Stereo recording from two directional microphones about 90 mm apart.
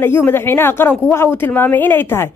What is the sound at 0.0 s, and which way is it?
Speech, 25° left (ahead or behind).